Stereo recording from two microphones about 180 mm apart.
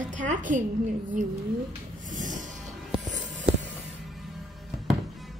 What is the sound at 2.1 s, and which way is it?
Music, 45° right (ahead or behind).